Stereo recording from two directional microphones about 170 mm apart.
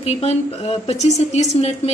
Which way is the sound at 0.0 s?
40° left (ahead or behind).